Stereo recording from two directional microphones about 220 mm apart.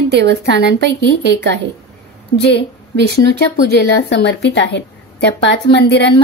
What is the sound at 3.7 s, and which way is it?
A woman's voice, 50° left (ahead or behind).